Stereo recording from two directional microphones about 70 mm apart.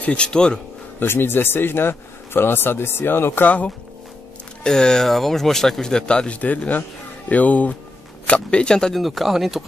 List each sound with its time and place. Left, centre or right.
0.0 s speech: centre
0.9 s speech: left
4.6 s speech: centre
9.0 s speech: centre